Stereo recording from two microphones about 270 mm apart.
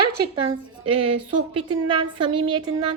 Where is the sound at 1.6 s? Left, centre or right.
Centre.